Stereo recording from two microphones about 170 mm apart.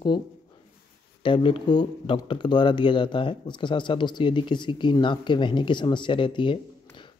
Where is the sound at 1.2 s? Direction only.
30° left (ahead or behind).